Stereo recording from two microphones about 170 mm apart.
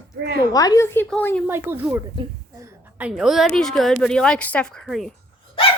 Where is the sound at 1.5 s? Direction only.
10° right (ahead or behind).